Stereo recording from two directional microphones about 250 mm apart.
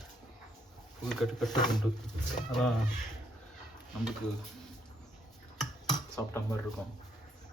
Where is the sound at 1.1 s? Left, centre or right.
Centre.